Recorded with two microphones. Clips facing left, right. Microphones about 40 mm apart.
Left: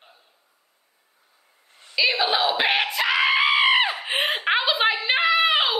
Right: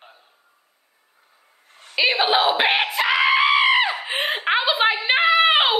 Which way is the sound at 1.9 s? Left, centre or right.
Right.